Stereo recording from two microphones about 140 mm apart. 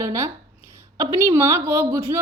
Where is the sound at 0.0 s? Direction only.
20° right (ahead or behind).